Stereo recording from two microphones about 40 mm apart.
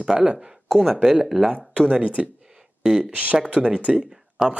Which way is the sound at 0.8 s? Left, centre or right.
Centre.